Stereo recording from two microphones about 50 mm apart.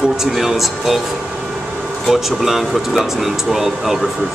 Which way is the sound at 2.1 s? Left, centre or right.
Centre.